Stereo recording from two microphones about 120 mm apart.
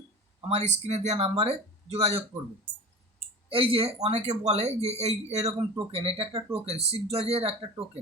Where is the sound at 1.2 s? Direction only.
55° right (ahead or behind).